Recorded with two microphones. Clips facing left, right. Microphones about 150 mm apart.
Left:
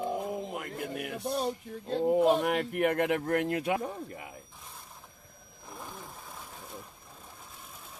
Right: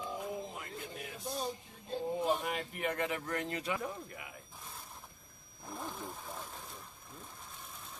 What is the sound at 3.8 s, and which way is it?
Speech, 35° left (ahead or behind).